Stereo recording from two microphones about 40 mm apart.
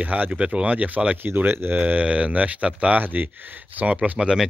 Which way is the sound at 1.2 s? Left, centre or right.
Right.